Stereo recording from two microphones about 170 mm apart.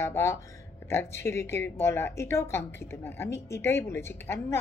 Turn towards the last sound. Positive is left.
turn(degrees=15)  # may be behind; listen again after turning